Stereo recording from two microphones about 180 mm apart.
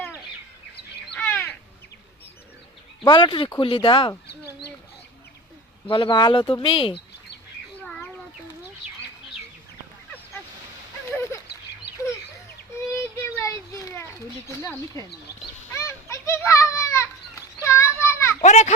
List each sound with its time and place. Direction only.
1.1 s crow: 10° left (ahead or behind)
3.0 s speech: 25° left (ahead or behind)
5.9 s speech: 25° left (ahead or behind)
11.1 s a sound: 15° left (ahead or behind)
12.9 s children playing: 15° left (ahead or behind)
15.7 s a sound: 15° left (ahead or behind)
18.4 s a child's voice: 40° left (ahead or behind)